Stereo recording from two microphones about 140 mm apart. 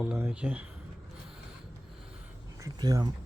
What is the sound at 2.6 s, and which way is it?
Speech, 25° right (ahead or behind).